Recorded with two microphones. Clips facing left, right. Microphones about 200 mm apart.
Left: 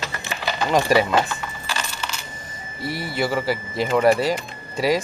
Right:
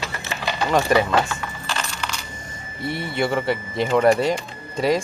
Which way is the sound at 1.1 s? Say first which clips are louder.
Even; 5° left (ahead or behind).